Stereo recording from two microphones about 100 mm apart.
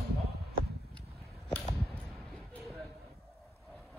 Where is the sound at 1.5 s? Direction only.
15° left (ahead or behind).